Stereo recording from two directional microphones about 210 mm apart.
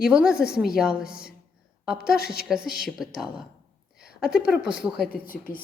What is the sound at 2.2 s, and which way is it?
Speech, 50° left (ahead or behind).